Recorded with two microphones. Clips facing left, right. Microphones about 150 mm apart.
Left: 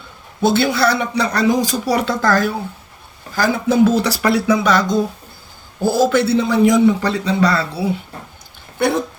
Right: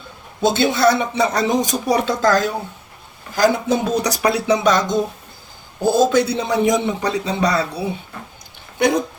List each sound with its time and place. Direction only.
0.4 s speech: 20° right (ahead or behind)